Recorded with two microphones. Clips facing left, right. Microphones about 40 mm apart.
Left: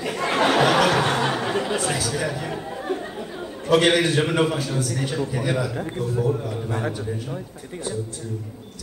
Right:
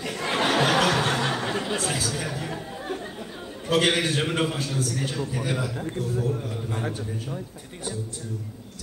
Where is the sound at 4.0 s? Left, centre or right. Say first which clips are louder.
Left 5 dB; left.